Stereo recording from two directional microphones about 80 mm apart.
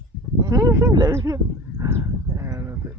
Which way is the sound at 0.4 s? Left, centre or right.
Right.